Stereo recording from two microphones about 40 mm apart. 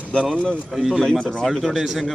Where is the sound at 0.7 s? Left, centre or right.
Centre.